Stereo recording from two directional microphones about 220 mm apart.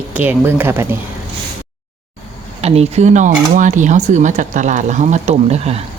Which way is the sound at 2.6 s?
30° right (ahead or behind).